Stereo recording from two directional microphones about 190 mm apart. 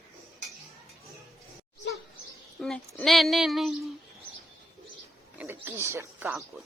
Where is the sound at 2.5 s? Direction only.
Centre (ahead or behind).